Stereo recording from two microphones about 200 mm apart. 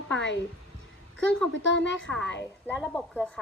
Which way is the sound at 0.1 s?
65° left (ahead or behind).